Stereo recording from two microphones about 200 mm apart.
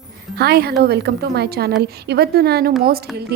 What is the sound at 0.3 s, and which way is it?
A woman's voice, 50° right (ahead or behind).